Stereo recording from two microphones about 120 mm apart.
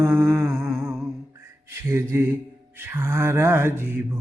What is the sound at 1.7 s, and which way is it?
Mantra, 20° right (ahead or behind).